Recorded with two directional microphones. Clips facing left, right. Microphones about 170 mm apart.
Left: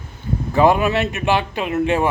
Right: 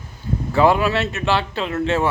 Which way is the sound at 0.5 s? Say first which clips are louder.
Left 1 dB; 20° left (ahead or behind).